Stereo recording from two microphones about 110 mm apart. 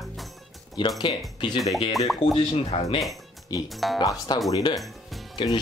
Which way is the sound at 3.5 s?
40° left (ahead or behind).